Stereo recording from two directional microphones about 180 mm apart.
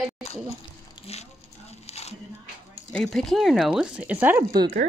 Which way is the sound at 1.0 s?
35° left (ahead or behind).